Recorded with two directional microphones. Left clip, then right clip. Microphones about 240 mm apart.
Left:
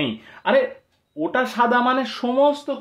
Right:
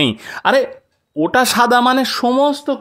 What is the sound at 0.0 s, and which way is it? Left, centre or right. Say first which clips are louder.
Speech: right 8 dB; right.